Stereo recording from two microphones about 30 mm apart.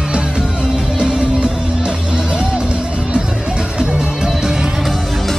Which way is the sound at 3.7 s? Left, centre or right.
Right.